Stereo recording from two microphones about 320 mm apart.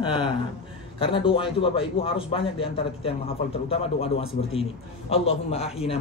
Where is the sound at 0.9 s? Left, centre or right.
Centre.